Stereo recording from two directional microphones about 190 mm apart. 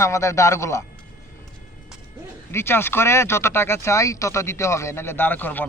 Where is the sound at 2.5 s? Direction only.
10° left (ahead or behind).